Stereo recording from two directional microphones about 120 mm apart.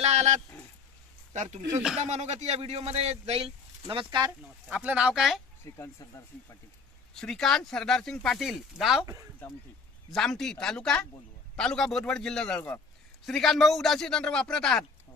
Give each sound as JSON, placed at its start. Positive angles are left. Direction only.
{"t": 0.0, "sound": "a sound", "side_deg": -70}
{"t": 1.3, "sound": "speech", "side_deg": -80}
{"t": 2.0, "sound": "a man's voice", "side_deg": -70}
{"t": 3.9, "sound": "speech", "side_deg": -40}
{"t": 4.6, "sound": "speech", "side_deg": -10}
{"t": 5.8, "sound": "speech", "side_deg": 25}
{"t": 7.2, "sound": "speech", "side_deg": 5}
{"t": 10.1, "sound": "speech", "side_deg": 5}